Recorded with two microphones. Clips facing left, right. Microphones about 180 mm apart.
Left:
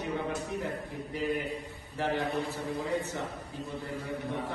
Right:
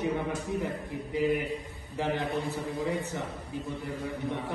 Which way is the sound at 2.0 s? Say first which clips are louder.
Even; 15° right (ahead or behind).